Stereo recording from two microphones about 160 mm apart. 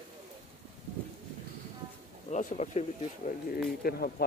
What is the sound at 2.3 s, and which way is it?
Speech, 50° left (ahead or behind).